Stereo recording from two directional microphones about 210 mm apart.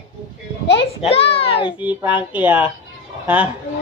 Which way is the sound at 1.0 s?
30° left (ahead or behind).